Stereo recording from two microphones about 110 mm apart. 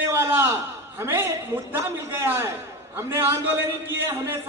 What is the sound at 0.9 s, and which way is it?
A man's voice, 20° right (ahead or behind).